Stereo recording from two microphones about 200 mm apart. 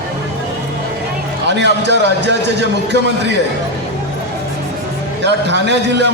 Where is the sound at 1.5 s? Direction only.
60° right (ahead or behind).